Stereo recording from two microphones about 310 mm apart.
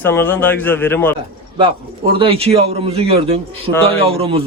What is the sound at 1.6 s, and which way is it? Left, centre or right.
A man's voice, centre.